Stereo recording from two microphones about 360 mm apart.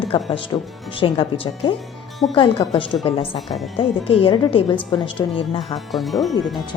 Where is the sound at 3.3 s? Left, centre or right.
Centre.